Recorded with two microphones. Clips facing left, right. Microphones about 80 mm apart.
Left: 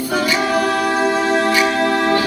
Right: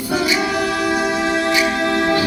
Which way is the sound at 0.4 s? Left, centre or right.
Left.